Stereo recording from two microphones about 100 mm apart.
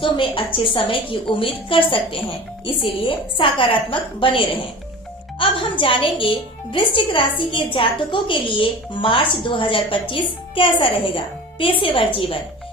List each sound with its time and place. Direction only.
0.0 s a woman's voice: 60° left (ahead or behind)